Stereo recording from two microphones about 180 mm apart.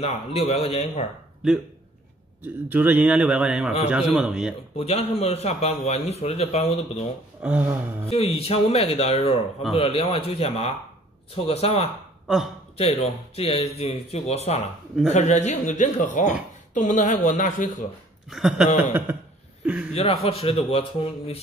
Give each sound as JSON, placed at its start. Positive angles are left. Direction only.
{"t": 0.0, "sound": "a man's voice", "side_deg": 35}
{"t": 2.4, "sound": "a man's voice", "side_deg": -10}
{"t": 4.7, "sound": "a man's voice", "side_deg": 35}
{"t": 7.4, "sound": "a man's voice", "side_deg": -10}
{"t": 8.1, "sound": "a man's voice", "side_deg": 35}
{"t": 18.3, "sound": "a man's voice", "side_deg": -5}
{"t": 19.6, "sound": "a sound", "side_deg": -5}
{"t": 19.9, "sound": "a man's voice", "side_deg": 35}